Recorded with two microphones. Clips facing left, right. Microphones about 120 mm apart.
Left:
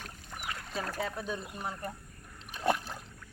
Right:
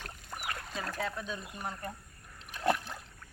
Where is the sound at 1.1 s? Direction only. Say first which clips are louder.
Left 3 dB; 40° left (ahead or behind).